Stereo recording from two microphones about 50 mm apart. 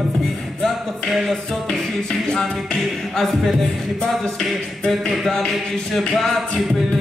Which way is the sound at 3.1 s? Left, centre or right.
Centre.